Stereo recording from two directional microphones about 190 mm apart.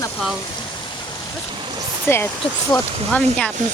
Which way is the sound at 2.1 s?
10° left (ahead or behind).